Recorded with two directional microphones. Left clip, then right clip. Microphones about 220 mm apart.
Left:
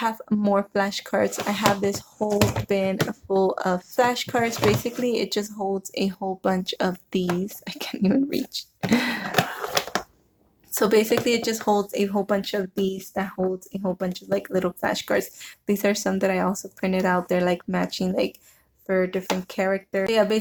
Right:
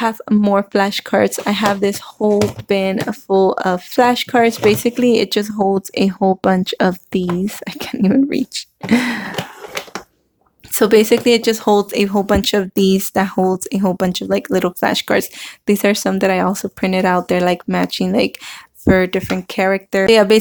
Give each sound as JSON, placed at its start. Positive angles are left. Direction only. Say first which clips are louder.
{"t": 0.0, "sound": "speech", "louder": "right 8 dB", "side_deg": -35}
{"t": 10.8, "sound": "speech", "louder": "right 8 dB", "side_deg": -30}